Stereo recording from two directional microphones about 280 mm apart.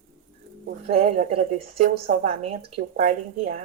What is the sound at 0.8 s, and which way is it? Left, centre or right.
A woman's voice, right.